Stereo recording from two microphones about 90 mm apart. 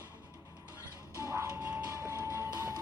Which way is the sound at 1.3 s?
30° right (ahead or behind).